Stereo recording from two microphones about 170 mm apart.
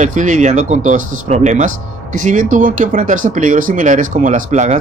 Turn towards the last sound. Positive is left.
turn(degrees=-45)  # may be behind; listen again after turning